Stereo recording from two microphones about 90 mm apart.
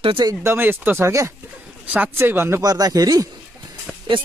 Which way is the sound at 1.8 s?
15° right (ahead or behind).